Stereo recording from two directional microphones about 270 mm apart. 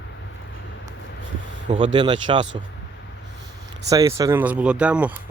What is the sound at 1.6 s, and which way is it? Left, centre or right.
Speech, centre.